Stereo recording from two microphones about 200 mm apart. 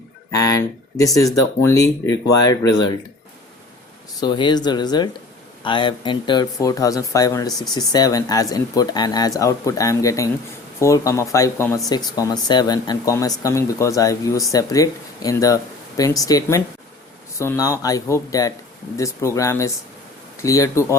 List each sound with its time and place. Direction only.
0.3 s speech: 15° left (ahead or behind)
4.2 s speech: 20° left (ahead or behind)